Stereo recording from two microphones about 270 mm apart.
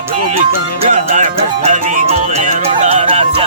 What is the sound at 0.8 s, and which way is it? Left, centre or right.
Music, right.